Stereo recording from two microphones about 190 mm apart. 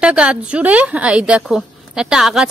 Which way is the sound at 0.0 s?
5° right (ahead or behind).